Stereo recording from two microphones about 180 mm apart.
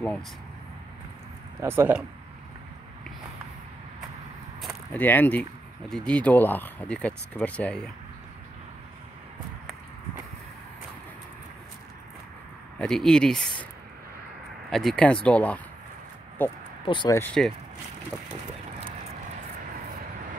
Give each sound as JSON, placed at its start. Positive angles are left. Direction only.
{"t": 1.6, "sound": "speech", "side_deg": -15}
{"t": 4.6, "sound": "a sound", "side_deg": 0}
{"t": 5.0, "sound": "speech", "side_deg": 10}
{"t": 12.7, "sound": "speech", "side_deg": 5}
{"t": 14.7, "sound": "speech", "side_deg": 0}
{"t": 16.8, "sound": "speech", "side_deg": 25}
{"t": 17.1, "sound": "speech", "side_deg": 10}